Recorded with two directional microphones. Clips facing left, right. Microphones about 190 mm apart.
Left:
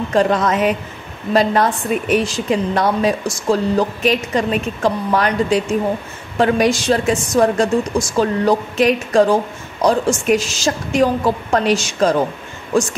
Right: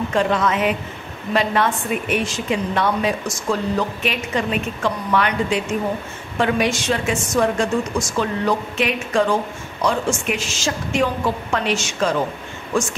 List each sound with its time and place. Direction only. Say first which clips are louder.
0.1 s a woman's voice: left 5 dB; 40° left (ahead or behind)